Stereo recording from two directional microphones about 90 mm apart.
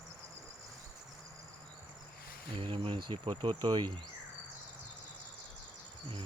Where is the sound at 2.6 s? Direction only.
90° right; by 3.9 s 55° right (ahead or behind).